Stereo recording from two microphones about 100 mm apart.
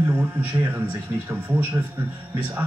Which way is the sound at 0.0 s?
20° right (ahead or behind).